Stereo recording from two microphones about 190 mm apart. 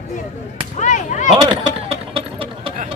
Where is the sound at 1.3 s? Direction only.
25° right (ahead or behind).